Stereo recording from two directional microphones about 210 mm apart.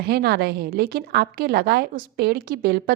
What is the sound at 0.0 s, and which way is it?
A woman's voice, 50° right (ahead or behind).